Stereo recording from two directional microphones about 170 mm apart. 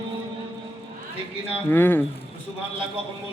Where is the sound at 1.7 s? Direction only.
10° left (ahead or behind).